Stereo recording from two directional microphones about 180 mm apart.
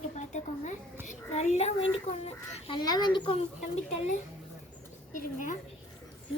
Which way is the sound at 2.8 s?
20° left (ahead or behind).